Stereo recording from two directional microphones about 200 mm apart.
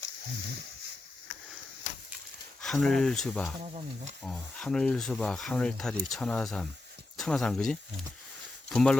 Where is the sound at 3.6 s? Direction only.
30° right (ahead or behind).